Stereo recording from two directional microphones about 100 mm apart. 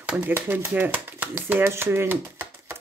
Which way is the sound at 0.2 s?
20° right (ahead or behind).